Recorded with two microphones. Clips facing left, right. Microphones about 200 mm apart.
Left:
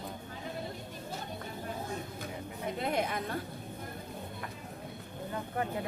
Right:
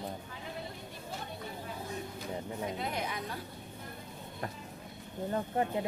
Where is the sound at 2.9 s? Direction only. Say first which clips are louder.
Left 5 dB; 55° left (ahead or behind).